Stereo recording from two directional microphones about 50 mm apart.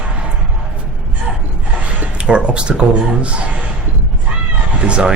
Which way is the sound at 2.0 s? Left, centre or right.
Right.